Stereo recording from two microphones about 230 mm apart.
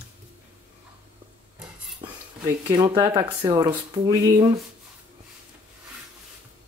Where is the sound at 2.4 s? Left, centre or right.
Centre.